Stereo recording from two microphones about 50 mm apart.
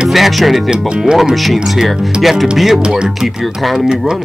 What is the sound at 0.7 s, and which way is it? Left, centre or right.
Speech, centre.